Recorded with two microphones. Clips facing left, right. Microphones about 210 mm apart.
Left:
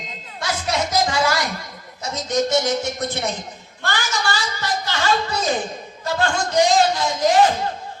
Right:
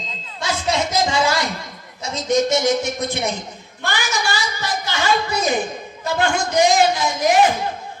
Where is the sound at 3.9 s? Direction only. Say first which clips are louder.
Right 1 dB; 10° right (ahead or behind).